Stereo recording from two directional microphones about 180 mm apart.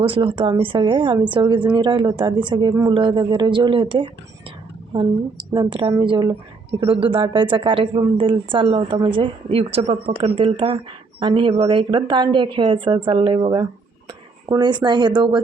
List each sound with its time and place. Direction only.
0.0 s a woman's voice: 30° right (ahead or behind)